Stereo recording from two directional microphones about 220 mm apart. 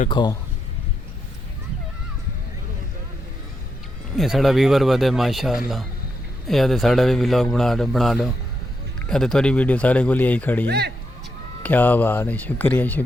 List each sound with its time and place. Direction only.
0.1 s a man's voice: 20° left (ahead or behind)
4.1 s a man's voice: centre (ahead or behind)
10.7 s speech: 50° right (ahead or behind)
11.6 s speech: 10° left (ahead or behind)